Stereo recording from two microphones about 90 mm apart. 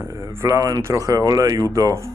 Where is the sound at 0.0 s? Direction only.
35° right (ahead or behind).